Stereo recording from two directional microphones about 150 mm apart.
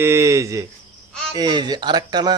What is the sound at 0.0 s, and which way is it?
Speech, 20° right (ahead or behind).